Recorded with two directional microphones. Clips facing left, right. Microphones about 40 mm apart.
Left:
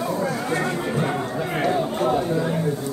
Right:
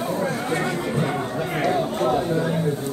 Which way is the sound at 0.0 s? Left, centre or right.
Right.